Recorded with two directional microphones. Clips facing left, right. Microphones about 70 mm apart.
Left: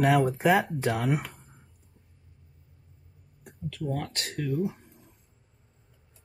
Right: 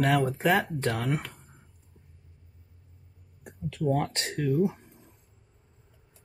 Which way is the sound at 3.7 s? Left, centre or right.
Right.